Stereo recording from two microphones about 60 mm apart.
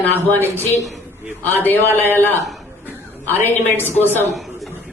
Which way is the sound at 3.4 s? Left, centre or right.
Left.